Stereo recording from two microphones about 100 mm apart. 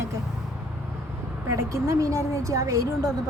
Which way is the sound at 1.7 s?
30° right (ahead or behind).